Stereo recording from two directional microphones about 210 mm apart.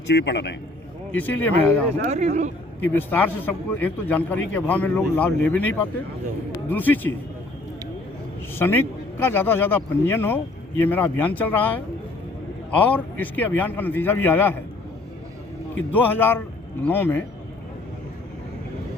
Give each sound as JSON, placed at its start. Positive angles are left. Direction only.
{"t": 0.1, "sound": "a man's voice", "side_deg": 55}
{"t": 1.1, "sound": "a man's voice", "side_deg": 10}
{"t": 2.0, "sound": "speech", "side_deg": -35}
{"t": 2.8, "sound": "a man's voice", "side_deg": 10}
{"t": 8.5, "sound": "a man's voice", "side_deg": 10}
{"t": 15.7, "sound": "a man's voice", "side_deg": 10}